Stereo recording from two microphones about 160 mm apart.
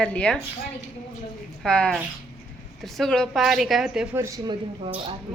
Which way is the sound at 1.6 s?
5° left (ahead or behind).